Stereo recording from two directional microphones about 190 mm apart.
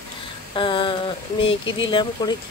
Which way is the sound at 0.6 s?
25° left (ahead or behind).